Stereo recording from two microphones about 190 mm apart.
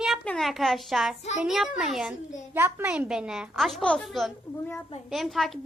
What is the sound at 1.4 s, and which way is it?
A woman's voice, centre (ahead or behind).